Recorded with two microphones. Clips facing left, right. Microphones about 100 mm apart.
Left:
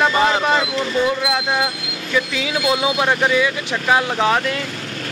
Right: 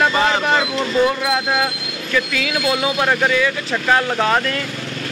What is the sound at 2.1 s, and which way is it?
Speech, 20° left (ahead or behind).